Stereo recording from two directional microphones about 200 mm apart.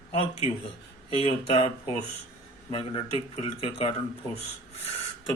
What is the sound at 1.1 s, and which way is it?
A man's voice, 30° left (ahead or behind).